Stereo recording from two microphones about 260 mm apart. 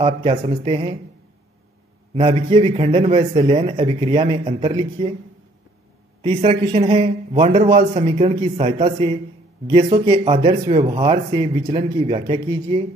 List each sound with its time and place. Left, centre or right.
0.0 s speech: right
2.1 s speech: right
6.2 s speech: right